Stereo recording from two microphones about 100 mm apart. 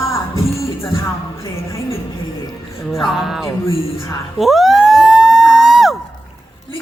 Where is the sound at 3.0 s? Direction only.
5° right (ahead or behind).